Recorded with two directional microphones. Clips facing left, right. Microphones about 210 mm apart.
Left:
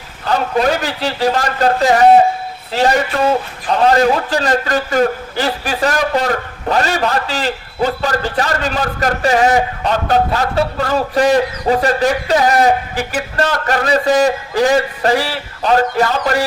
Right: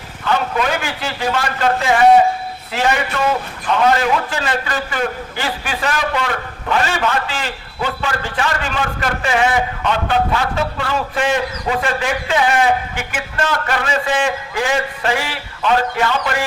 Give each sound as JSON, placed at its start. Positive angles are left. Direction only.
{"t": 0.3, "sound": "a man's voice", "side_deg": 40}